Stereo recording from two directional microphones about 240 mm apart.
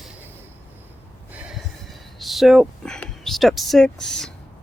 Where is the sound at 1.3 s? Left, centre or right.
Centre.